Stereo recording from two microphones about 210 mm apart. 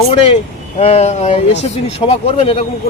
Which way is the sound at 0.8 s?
30° left (ahead or behind).